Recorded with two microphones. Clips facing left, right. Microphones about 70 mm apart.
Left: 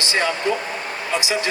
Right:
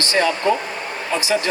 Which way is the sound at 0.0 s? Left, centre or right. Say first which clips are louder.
Right 3 dB; centre.